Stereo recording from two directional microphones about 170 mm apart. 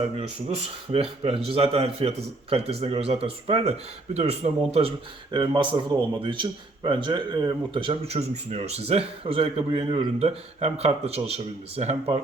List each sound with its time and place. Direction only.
0.9 s speech: 35° right (ahead or behind)